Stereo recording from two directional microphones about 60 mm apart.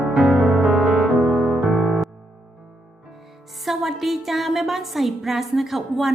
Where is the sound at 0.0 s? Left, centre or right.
Centre.